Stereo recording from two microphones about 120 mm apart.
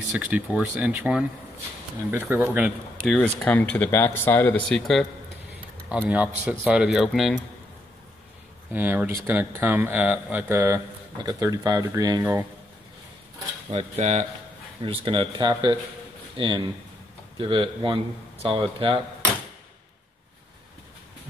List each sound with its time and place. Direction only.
0.2 s speech: 10° right (ahead or behind)
3.0 s speech: 5° left (ahead or behind)
4.6 s speech: 5° left (ahead or behind)
6.0 s speech: 10° right (ahead or behind)
8.7 s speech: 15° right (ahead or behind)
13.7 s speech: 70° right (ahead or behind)
14.8 s speech: 45° right (ahead or behind)